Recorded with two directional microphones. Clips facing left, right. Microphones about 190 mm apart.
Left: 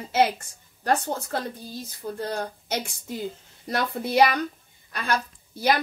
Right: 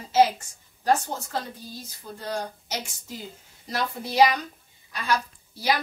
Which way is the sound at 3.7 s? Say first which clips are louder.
Left 4 dB; 55° left (ahead or behind).